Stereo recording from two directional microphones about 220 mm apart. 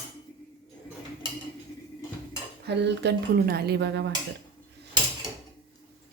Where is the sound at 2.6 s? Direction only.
50° right (ahead or behind).